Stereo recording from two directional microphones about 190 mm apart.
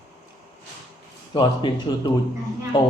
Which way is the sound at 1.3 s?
25° left (ahead or behind).